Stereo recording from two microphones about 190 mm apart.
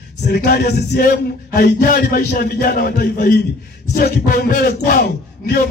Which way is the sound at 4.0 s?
55° left (ahead or behind).